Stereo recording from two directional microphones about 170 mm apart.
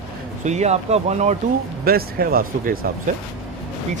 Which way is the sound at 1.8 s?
60° right (ahead or behind).